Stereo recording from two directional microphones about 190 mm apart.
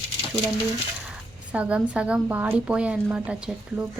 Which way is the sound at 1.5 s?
5° right (ahead or behind).